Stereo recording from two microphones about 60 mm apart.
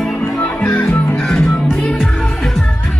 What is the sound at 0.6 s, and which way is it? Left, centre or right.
Music, left.